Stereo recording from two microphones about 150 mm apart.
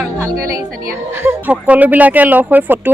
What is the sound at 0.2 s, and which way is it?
A woman's voice, 20° right (ahead or behind).